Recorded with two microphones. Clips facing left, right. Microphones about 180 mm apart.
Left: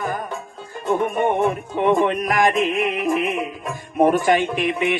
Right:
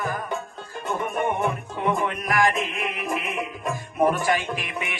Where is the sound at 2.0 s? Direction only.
20° left (ahead or behind).